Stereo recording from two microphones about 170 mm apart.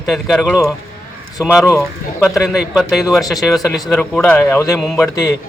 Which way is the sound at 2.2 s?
Centre (ahead or behind).